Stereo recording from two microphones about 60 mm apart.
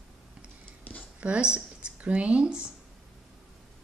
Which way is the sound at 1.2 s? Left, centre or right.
Centre.